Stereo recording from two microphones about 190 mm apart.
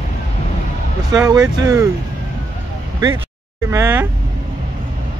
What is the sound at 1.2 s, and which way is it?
Speech, 20° right (ahead or behind).